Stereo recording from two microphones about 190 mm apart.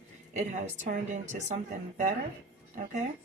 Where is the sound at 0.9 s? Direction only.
40° right (ahead or behind).